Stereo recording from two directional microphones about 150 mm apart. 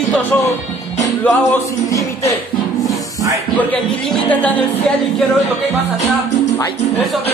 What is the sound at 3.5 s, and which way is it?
Speech, 10° left (ahead or behind).